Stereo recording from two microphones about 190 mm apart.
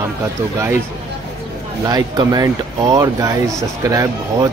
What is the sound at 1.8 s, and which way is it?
Speech, 20° right (ahead or behind).